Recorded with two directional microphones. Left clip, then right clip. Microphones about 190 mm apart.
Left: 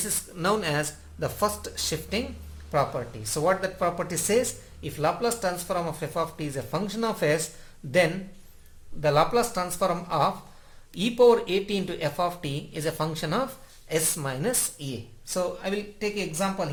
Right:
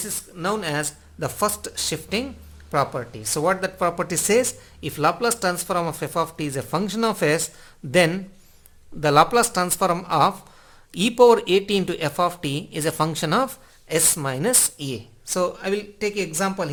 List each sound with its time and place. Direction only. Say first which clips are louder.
0.3 s speech: right 1 dB; 20° right (ahead or behind)
1.2 s speech: right 3 dB; 35° right (ahead or behind); by 16.6 s 55° right (ahead or behind)